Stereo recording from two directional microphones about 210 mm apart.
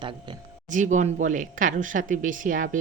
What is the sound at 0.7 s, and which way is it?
Speech, 35° right (ahead or behind).